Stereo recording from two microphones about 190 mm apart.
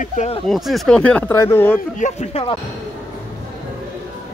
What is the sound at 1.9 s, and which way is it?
Speech, 40° left (ahead or behind).